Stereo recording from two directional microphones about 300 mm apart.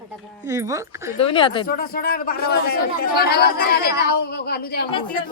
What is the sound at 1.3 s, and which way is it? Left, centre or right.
Speech, centre.